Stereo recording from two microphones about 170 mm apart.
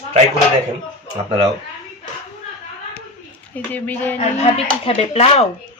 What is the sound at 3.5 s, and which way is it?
Speech, 10° left (ahead or behind).